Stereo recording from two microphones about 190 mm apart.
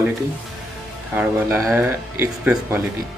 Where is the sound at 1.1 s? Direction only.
10° right (ahead or behind).